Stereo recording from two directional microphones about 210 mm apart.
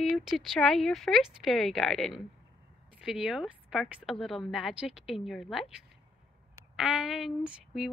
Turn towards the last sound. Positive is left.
turn(degrees=-5)  # may be behind; listen again after turning